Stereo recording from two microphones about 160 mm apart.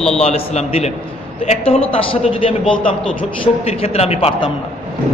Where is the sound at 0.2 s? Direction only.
40° left (ahead or behind).